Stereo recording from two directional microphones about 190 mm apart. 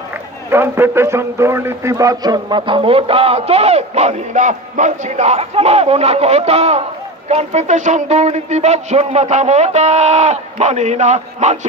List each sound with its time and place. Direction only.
0.5 s speech: 10° right (ahead or behind); by 11.5 s 35° right (ahead or behind)